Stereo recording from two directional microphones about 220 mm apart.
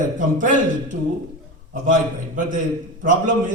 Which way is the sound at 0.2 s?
35° right (ahead or behind).